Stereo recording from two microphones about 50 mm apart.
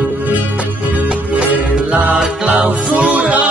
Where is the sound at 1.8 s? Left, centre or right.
Right.